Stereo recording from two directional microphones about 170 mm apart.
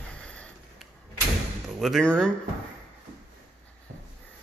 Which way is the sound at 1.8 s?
5° left (ahead or behind).